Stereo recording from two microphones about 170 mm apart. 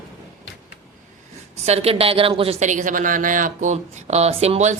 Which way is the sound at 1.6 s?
40° right (ahead or behind).